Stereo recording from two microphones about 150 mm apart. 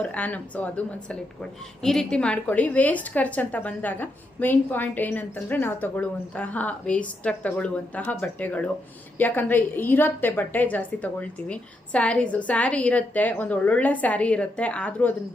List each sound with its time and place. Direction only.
0.0 s a woman's voice: 10° left (ahead or behind)